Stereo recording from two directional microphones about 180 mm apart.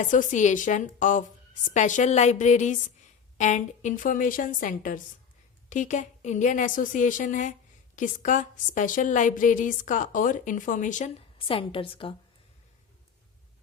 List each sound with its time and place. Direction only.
0.0 s a woman's voice: 45° left (ahead or behind)
11.3 s a woman's voice: 30° left (ahead or behind)